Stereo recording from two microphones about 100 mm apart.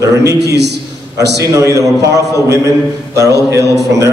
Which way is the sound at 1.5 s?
35° right (ahead or behind).